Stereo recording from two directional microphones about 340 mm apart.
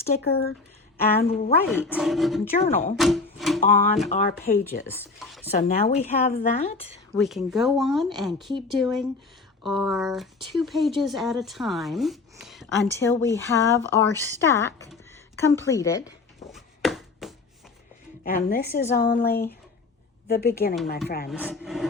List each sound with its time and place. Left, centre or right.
0.0 s speech: left
1.6 s speech: centre
3.0 s music: centre
3.6 s speech: left
4.9 s speech: centre
5.5 s speech: left
7.1 s a woman's voice: centre
16.5 s chopping: centre
18.2 s speech: left
21.2 s speech: centre